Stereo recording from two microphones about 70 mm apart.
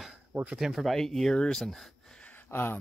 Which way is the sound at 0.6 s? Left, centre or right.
Centre.